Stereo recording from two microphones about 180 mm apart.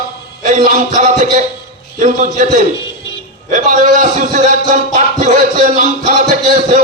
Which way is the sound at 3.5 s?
45° right (ahead or behind).